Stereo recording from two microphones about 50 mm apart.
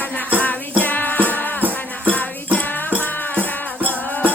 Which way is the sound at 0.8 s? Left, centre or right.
Left.